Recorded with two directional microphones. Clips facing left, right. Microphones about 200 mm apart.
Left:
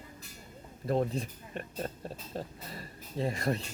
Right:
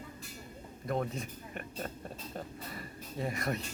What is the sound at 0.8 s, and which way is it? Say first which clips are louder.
Speech: left 4 dB; 30° left (ahead or behind).